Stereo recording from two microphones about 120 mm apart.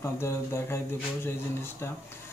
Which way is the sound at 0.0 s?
20° left (ahead or behind).